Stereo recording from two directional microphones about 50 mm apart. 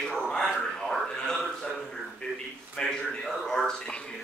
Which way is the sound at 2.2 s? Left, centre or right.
Left.